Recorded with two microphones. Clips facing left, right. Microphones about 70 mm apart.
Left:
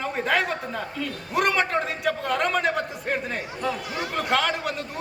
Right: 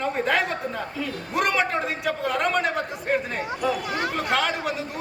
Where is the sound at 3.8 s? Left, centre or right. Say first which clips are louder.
Right 4 dB; right.